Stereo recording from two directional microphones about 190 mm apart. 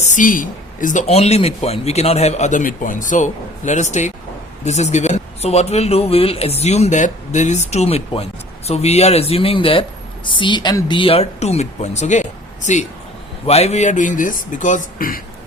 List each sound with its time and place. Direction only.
0.0 s speech: 40° left (ahead or behind)